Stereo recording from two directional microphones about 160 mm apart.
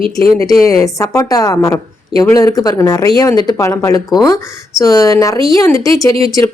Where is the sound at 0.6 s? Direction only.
20° left (ahead or behind).